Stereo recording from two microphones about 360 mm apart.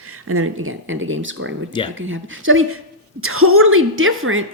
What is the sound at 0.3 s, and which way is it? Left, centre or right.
A woman's voice, right.